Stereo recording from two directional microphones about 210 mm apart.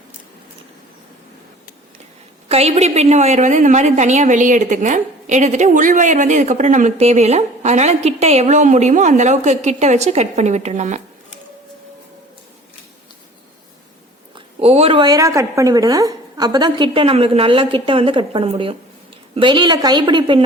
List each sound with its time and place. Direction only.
2.5 s a woman's voice: 30° right (ahead or behind)
14.3 s a woman's voice: 30° right (ahead or behind)